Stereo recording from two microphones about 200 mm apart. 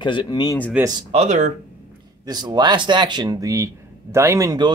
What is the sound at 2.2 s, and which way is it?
Speech, 20° right (ahead or behind).